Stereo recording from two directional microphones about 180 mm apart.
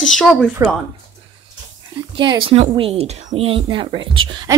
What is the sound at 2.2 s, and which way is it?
Speech, 25° right (ahead or behind).